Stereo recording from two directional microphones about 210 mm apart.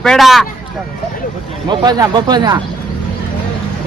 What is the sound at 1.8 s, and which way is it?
Speech, 20° right (ahead or behind).